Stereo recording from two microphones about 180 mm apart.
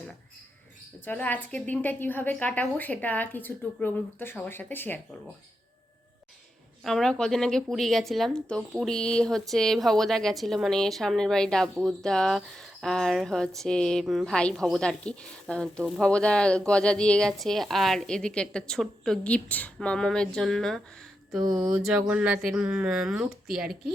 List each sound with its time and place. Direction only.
1.0 s a woman's voice: 10° left (ahead or behind)
6.8 s speech: 5° left (ahead or behind)